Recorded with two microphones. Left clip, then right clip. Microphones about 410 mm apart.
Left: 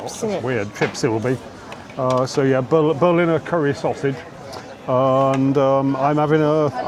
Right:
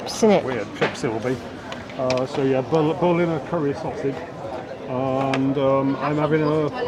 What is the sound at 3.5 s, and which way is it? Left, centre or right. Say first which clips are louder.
Speech: left 3 dB; left.